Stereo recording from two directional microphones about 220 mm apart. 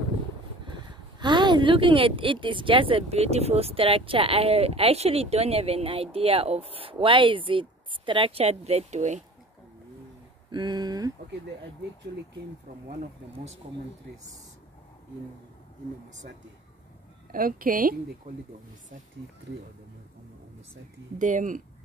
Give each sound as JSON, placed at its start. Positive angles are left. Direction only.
{"t": 0.7, "sound": "speech", "side_deg": -20}
{"t": 10.5, "sound": "speech", "side_deg": -20}
{"t": 17.3, "sound": "a woman's voice", "side_deg": -40}
{"t": 21.2, "sound": "a woman's voice", "side_deg": -35}